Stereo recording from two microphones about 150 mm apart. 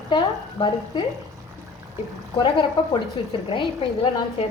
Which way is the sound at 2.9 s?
35° left (ahead or behind).